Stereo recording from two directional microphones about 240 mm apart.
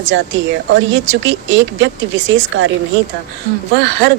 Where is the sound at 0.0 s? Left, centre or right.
Right.